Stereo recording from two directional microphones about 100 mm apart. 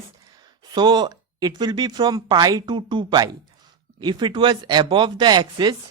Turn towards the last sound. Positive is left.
turn(degrees=-45)  # may be behind; listen again after turning